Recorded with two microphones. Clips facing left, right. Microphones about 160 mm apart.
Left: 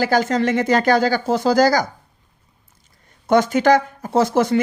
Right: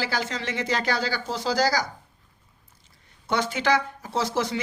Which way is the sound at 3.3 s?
45° left (ahead or behind).